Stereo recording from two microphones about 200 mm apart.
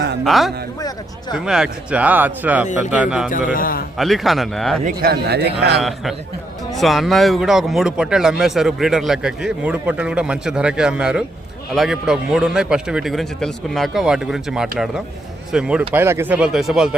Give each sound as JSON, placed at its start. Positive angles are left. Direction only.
{"t": 0.3, "sound": "a man's voice", "side_deg": 0}
{"t": 0.8, "sound": "speech", "side_deg": 20}
{"t": 1.5, "sound": "a man's voice", "side_deg": -5}
{"t": 3.2, "sound": "a man's voice", "side_deg": 45}
{"t": 3.9, "sound": "a man's voice", "side_deg": 0}
{"t": 4.8, "sound": "a man's voice", "side_deg": -45}
{"t": 6.7, "sound": "a man's voice", "side_deg": 0}